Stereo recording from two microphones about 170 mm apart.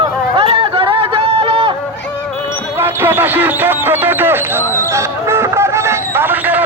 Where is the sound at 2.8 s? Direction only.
10° right (ahead or behind).